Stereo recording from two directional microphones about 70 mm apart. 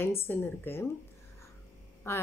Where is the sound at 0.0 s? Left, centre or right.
Left.